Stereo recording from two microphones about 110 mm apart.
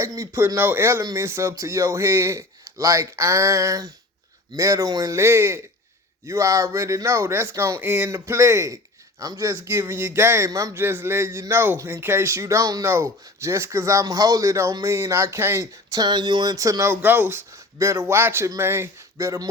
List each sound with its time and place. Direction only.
0.0 s speech: 30° right (ahead or behind)